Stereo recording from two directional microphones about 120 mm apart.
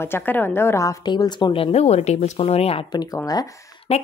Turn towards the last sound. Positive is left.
turn(degrees=60)  # may be behind; listen again after turning